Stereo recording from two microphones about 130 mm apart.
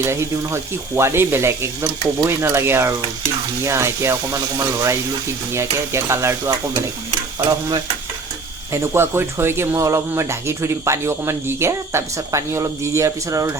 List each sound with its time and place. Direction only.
0.0 s speech: 20° right (ahead or behind)
8.7 s speech: 20° right (ahead or behind)